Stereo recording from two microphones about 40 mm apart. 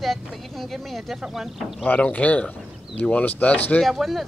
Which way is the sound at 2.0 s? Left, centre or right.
Left.